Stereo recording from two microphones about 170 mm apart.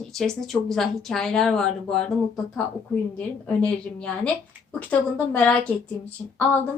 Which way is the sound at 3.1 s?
10° left (ahead or behind).